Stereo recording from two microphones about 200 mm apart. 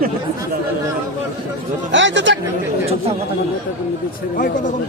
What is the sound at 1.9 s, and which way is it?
Speech, 65° right (ahead or behind).